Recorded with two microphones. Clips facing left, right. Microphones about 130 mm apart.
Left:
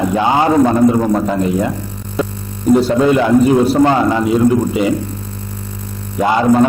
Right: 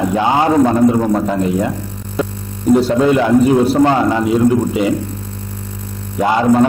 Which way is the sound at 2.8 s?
15° left (ahead or behind).